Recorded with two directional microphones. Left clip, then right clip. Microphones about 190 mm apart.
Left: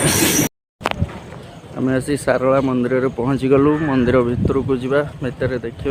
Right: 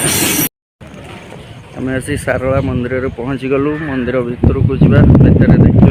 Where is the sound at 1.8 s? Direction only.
10° left (ahead or behind).